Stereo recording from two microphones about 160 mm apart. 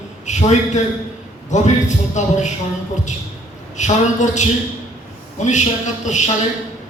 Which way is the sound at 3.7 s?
50° left (ahead or behind).